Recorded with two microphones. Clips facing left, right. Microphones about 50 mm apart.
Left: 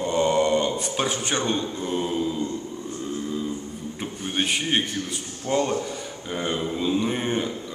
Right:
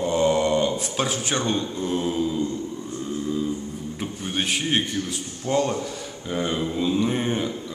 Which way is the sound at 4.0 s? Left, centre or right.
Centre.